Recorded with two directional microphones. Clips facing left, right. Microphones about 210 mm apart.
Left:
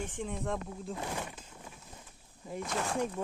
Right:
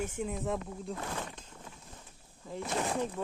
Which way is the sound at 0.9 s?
15° left (ahead or behind).